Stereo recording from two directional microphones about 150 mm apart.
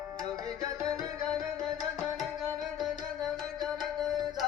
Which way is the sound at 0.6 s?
25° right (ahead or behind).